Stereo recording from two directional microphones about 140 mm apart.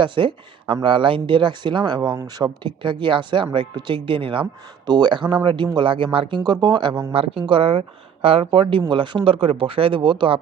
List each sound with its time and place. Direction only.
0.0 s speech: 35° right (ahead or behind)